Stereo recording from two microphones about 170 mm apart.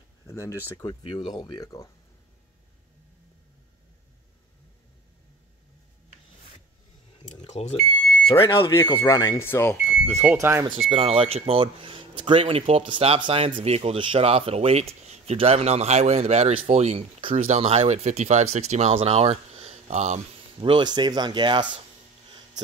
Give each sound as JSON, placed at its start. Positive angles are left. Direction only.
{"t": 0.3, "sound": "speech", "side_deg": 15}
{"t": 0.8, "sound": "speech", "side_deg": 30}
{"t": 1.4, "sound": "speech", "side_deg": 20}
{"t": 7.2, "sound": "smoke detector", "side_deg": 40}
{"t": 8.3, "sound": "speech", "side_deg": 30}
{"t": 8.7, "sound": "speech", "side_deg": 15}
{"t": 9.8, "sound": "speech", "side_deg": -10}
{"t": 10.9, "sound": "speech", "side_deg": -35}
{"t": 20.6, "sound": "speech", "side_deg": -25}